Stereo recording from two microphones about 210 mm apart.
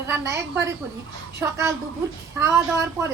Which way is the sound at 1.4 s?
15° right (ahead or behind).